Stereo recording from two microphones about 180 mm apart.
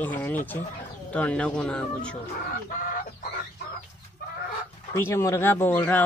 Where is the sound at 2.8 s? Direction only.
50° left (ahead or behind).